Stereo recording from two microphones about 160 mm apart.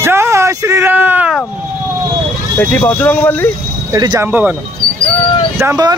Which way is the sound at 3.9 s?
25° right (ahead or behind).